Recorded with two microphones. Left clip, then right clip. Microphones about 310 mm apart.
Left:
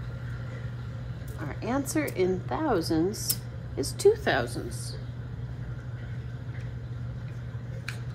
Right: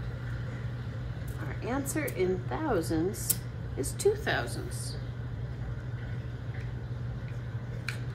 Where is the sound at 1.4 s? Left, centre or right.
Centre.